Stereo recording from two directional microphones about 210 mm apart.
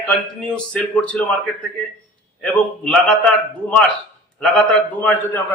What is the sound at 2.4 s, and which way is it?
Speech, 5° left (ahead or behind).